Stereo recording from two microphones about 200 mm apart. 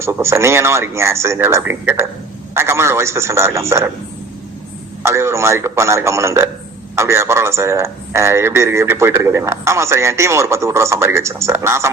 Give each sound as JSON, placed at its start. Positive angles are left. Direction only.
{"t": 0.0, "sound": "a man's voice", "side_deg": -15}
{"t": 5.0, "sound": "a man's voice", "side_deg": -15}